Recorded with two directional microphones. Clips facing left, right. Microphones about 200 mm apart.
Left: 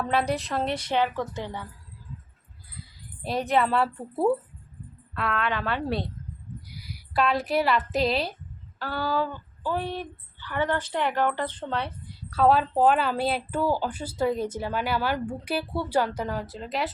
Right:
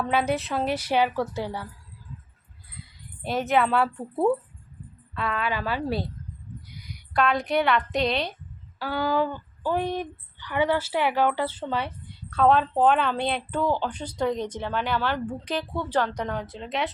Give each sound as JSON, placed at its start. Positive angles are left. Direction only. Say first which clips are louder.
{"t": 0.0, "sound": "speech", "louder": "right 1 dB", "side_deg": 0}
{"t": 3.2, "sound": "a woman's voice", "louder": "right 1 dB", "side_deg": 0}
{"t": 8.8, "sound": "a woman's voice", "louder": "right 3 dB", "side_deg": -15}